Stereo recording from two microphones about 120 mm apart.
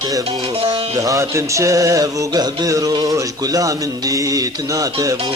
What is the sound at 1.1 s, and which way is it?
A man's voice, 25° right (ahead or behind).